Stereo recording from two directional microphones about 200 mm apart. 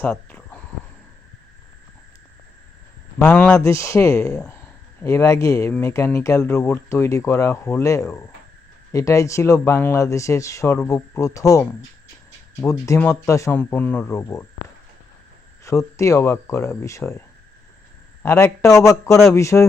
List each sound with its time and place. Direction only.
0.0 s a sound: 5° left (ahead or behind)
3.2 s speech: 5° left (ahead or behind)
16.0 s speech: 15° left (ahead or behind)